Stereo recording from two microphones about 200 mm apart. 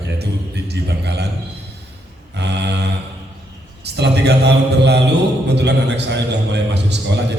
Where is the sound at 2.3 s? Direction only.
60° right (ahead or behind).